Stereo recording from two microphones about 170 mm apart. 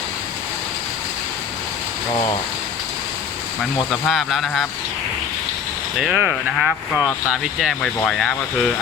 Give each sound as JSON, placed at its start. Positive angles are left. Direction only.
{"t": 4.1, "sound": "speech", "side_deg": 0}
{"t": 6.0, "sound": "speech", "side_deg": -5}